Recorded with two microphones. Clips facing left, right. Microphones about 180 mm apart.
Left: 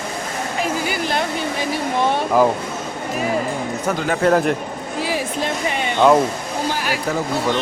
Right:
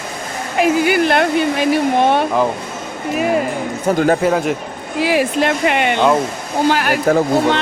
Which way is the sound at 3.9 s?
50° right (ahead or behind).